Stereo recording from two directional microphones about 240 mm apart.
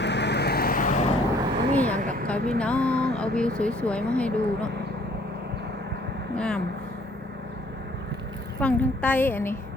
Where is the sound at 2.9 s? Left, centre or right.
Right.